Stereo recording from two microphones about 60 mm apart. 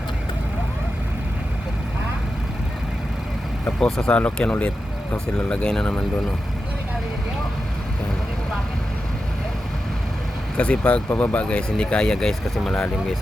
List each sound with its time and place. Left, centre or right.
3.8 s speech: centre
4.1 s speech: centre
10.6 s speech: centre
11.4 s speech: centre